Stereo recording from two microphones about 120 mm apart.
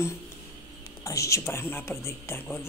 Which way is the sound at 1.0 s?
25° left (ahead or behind).